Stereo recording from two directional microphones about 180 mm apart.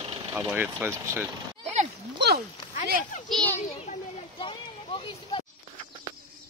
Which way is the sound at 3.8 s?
30° left (ahead or behind).